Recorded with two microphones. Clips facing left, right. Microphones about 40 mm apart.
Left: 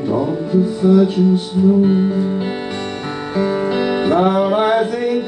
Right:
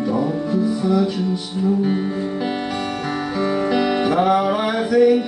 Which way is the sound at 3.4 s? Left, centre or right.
Centre.